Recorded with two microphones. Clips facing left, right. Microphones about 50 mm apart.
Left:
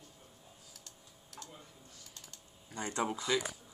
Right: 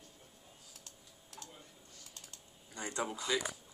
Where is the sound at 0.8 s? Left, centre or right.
Right.